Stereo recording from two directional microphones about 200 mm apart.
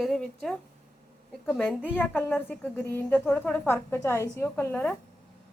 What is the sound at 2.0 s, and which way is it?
A woman's voice, 10° left (ahead or behind).